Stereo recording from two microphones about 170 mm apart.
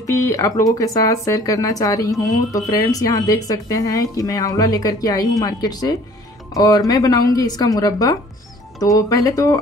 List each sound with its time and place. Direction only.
0.0 s speech: 20° left (ahead or behind)